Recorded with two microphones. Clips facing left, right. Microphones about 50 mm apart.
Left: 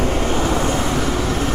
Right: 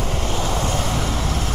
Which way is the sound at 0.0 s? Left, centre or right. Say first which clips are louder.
Left 5 dB; left.